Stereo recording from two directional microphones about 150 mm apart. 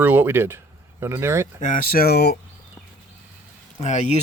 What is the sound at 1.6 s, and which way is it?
Speech, 60° left (ahead or behind).